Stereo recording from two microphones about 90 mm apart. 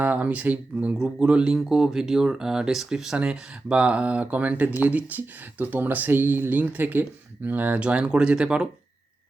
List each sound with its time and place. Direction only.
0.0 s speech: 20° right (ahead or behind)